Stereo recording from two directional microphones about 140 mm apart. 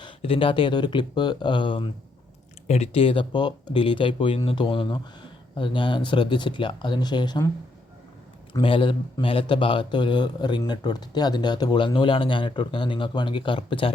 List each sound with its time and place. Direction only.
0.0 s speech: 40° left (ahead or behind)
2.6 s speech: 50° left (ahead or behind); by 7.4 s 30° left (ahead or behind)
8.6 s speech: 40° left (ahead or behind)